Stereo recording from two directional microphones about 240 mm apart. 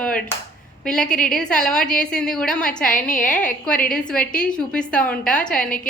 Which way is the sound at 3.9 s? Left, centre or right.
Centre.